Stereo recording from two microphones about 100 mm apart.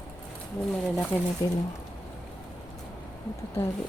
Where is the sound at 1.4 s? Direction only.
35° left (ahead or behind).